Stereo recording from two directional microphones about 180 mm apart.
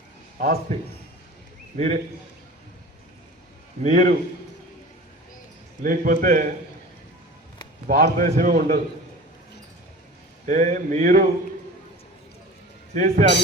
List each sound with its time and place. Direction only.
0.3 s a man's voice: 50° right (ahead or behind)
1.7 s a man's voice: 40° right (ahead or behind)
3.8 s a man's voice: 45° right (ahead or behind)
5.8 s a man's voice: 50° right (ahead or behind)
7.9 s a man's voice: 50° right (ahead or behind)
10.4 s a man's voice: 45° right (ahead or behind)
12.9 s speech: 45° right (ahead or behind)